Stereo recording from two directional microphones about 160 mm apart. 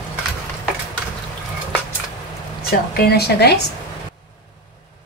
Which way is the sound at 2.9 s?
75° left (ahead or behind).